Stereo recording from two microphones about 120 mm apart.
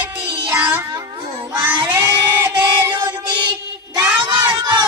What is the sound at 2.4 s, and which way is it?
Music, 20° right (ahead or behind).